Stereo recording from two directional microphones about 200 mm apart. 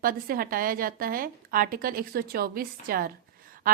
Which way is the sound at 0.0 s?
45° right (ahead or behind).